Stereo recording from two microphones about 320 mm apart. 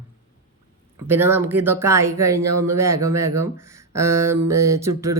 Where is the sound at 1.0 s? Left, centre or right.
Centre.